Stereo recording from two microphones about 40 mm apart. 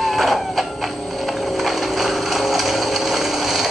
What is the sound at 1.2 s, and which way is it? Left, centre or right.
Ratchet, centre.